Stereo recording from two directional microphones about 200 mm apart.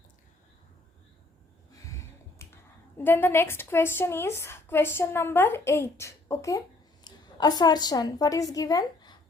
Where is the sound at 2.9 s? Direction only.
10° left (ahead or behind).